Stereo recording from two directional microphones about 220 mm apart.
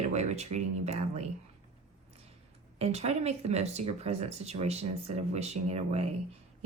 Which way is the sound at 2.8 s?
30° right (ahead or behind).